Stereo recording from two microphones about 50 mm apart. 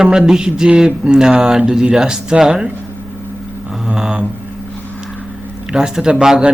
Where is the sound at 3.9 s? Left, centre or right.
Centre.